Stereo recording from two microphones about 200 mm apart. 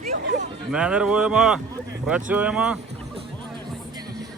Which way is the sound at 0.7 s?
5° right (ahead or behind).